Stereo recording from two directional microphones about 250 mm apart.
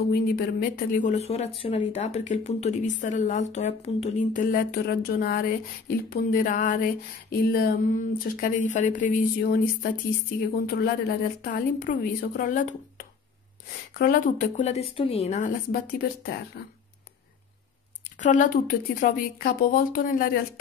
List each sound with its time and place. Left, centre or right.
0.1 s a woman's voice: left
13.9 s speech: left
18.2 s speech: left